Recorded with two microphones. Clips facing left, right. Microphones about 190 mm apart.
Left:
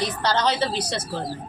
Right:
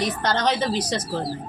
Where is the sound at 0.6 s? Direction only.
15° right (ahead or behind).